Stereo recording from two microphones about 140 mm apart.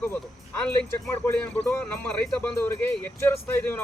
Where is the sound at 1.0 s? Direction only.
15° left (ahead or behind).